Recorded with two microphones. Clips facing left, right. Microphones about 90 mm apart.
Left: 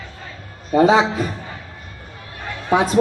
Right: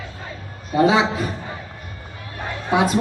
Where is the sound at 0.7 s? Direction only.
35° left (ahead or behind).